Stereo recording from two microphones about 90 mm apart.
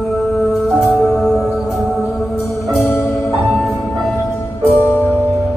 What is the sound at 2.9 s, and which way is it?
Music, 30° left (ahead or behind).